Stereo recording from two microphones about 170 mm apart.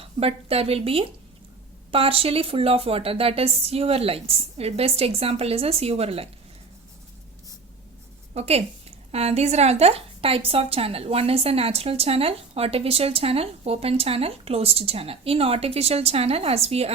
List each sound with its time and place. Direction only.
0.0 s a woman's voice: 35° right (ahead or behind)
8.3 s a woman's voice: 40° right (ahead or behind)